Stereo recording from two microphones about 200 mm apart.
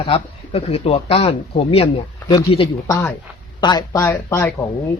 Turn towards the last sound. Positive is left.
turn(degrees=15)  # may be behind; listen again after turning